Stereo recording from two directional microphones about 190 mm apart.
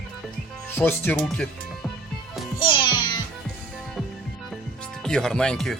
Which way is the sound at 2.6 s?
25° left (ahead or behind).